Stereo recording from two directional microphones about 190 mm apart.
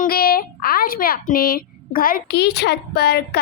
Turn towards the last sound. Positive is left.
turn(degrees=55)  # may be behind; listen again after turning